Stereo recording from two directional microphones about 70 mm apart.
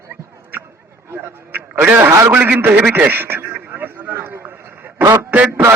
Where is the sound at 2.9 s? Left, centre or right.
Right.